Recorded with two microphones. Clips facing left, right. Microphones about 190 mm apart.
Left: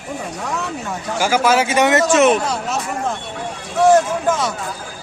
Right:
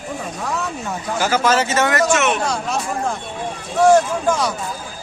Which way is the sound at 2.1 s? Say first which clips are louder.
Left 5 dB; 35° left (ahead or behind).